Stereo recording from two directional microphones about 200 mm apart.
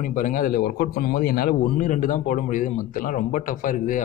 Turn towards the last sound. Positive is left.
turn(degrees=45)  # may be behind; listen again after turning